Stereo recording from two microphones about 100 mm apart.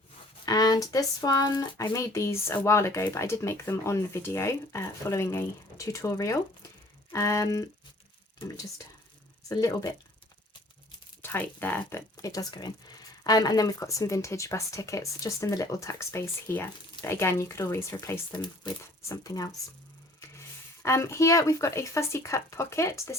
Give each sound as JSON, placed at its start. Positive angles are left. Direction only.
{"t": 0.4, "sound": "a woman's voice", "side_deg": 40}
{"t": 9.5, "sound": "a woman's voice", "side_deg": 35}
{"t": 11.2, "sound": "speech", "side_deg": 20}
{"t": 12.1, "sound": "a woman's voice", "side_deg": 35}
{"t": 18.3, "sound": "speech", "side_deg": 45}
{"t": 19.0, "sound": "a woman's voice", "side_deg": 35}
{"t": 20.8, "sound": "speech", "side_deg": 30}